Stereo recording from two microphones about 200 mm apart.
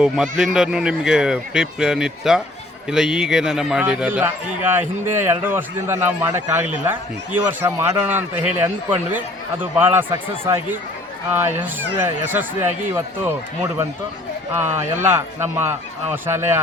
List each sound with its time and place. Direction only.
0.0 s a man's voice: 5° right (ahead or behind)
15.0 s a man's voice: 10° right (ahead or behind)